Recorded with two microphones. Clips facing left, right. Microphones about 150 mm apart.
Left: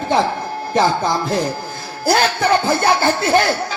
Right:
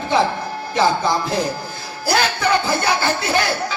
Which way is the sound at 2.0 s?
50° left (ahead or behind).